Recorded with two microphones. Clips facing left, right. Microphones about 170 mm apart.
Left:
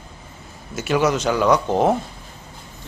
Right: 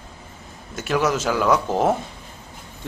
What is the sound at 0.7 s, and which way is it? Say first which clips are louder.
Speech: left 2 dB; centre (ahead or behind).